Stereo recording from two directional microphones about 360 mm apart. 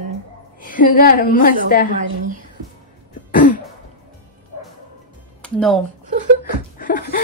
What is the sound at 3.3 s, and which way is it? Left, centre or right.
Throat clearing, left.